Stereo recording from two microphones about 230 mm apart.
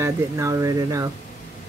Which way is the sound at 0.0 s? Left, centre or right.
Centre.